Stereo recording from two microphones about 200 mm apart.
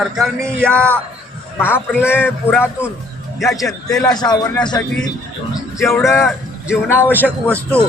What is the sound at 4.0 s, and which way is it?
Speech, 20° left (ahead or behind).